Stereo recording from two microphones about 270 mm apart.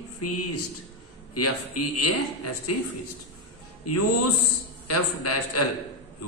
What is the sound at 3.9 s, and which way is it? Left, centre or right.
A man's voice, left.